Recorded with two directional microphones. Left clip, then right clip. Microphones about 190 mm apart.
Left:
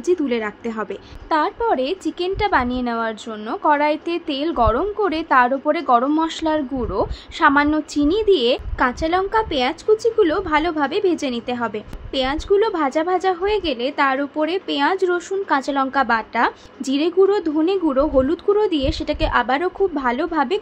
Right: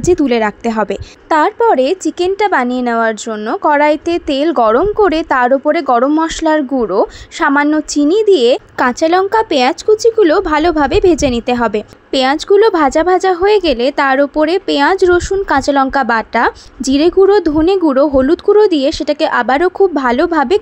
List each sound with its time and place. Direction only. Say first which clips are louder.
0.0 s a woman's voice: right 9 dB; 45° right (ahead or behind)